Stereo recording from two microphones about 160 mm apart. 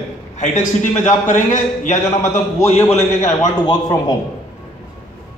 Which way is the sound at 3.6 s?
25° left (ahead or behind).